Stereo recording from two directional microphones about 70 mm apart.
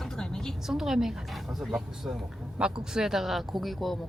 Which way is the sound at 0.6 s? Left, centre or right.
Centre.